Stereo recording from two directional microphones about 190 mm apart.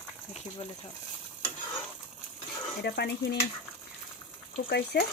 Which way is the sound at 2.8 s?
60° left (ahead or behind).